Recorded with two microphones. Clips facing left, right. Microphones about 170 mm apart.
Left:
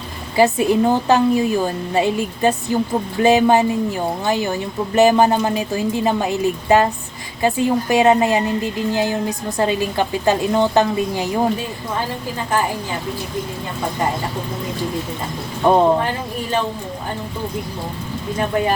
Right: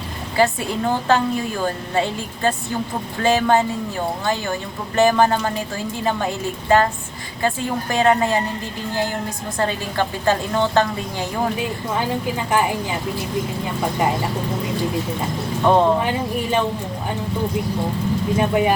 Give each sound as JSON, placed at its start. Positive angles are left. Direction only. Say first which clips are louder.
{"t": 0.3, "sound": "a woman's voice", "louder": "left 5 dB", "side_deg": 15}
{"t": 15.7, "sound": "a woman's voice", "louder": "left 1 dB", "side_deg": 15}
{"t": 18.3, "sound": "speech", "louder": "even", "side_deg": -15}